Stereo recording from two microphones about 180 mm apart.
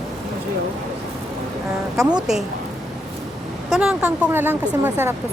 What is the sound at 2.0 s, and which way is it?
Speech, 25° right (ahead or behind).